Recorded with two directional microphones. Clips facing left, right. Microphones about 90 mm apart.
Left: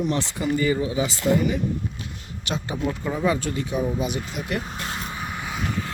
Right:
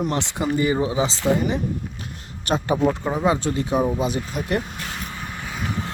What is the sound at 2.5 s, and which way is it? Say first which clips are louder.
Speech: right 6 dB; 45° right (ahead or behind).